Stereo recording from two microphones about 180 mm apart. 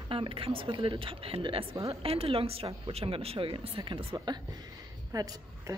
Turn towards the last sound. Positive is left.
turn(degrees=-20)  # may be behind; listen again after turning